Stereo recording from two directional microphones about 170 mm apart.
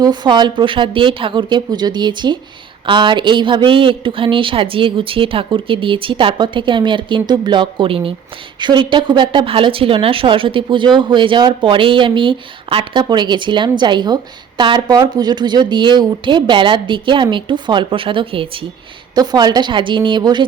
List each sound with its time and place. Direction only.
0.0 s a woman's voice: 25° right (ahead or behind)